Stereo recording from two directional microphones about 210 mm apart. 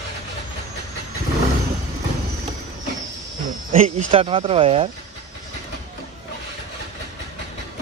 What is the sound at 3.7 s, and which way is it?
Speech, 35° right (ahead or behind).